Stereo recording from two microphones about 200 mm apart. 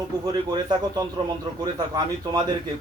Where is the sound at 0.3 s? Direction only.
20° right (ahead or behind).